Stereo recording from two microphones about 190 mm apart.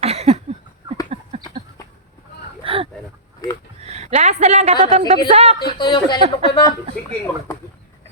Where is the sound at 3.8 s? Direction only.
35° right (ahead or behind).